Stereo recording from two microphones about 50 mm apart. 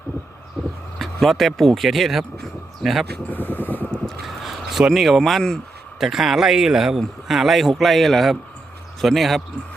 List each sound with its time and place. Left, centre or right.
0.9 s speech: centre
3.2 s vehicle: left
4.0 s a sound: centre
4.9 s speech: centre
6.0 s speech: centre